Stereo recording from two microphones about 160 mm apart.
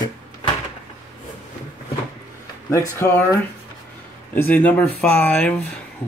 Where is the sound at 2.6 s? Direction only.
15° left (ahead or behind).